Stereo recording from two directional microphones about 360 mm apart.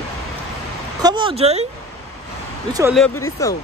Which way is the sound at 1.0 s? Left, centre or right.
Centre.